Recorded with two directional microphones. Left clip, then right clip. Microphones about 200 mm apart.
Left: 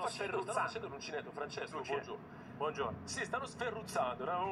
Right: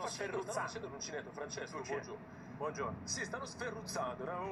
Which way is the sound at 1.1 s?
20° left (ahead or behind).